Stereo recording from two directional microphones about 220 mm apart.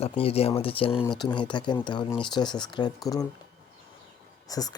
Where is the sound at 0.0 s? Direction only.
25° left (ahead or behind).